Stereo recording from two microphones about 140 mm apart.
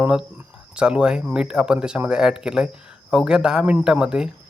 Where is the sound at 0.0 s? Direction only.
5° right (ahead or behind).